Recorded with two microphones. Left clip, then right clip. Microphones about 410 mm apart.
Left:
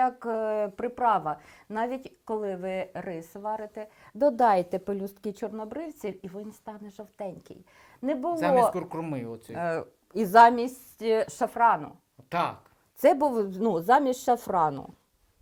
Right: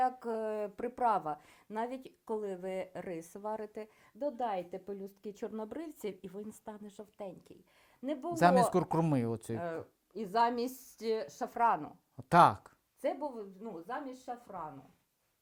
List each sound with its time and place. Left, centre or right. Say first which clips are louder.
0.0 s speech: left 7 dB; centre
4.2 s a woman's voice: left 14 dB; left
5.3 s a woman's voice: left 4 dB; centre; by 8.4 s left
8.4 s speech: left 3 dB; right
9.6 s speech: left 10 dB; centre
10.2 s a woman's voice: left 14 dB; left
10.9 s a woman's voice: left 11 dB; centre
12.3 s speech: right 5 dB; right
13.0 s a woman's voice: left 15 dB; left